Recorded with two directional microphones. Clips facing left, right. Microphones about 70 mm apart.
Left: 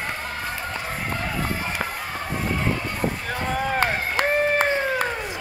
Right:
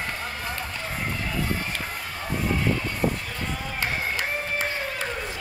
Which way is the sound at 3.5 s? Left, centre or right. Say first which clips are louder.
Left 8 dB; left.